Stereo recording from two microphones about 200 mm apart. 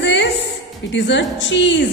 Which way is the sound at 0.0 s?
60° left (ahead or behind).